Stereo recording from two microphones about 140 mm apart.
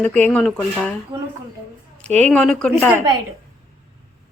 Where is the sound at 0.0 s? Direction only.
10° left (ahead or behind).